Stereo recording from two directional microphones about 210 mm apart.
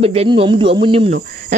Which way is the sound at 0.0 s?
30° right (ahead or behind).